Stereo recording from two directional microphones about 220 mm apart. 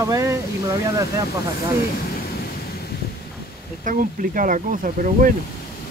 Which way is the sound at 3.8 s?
40° right (ahead or behind).